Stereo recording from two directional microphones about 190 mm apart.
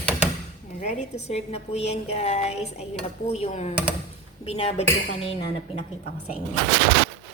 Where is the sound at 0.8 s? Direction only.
40° left (ahead or behind).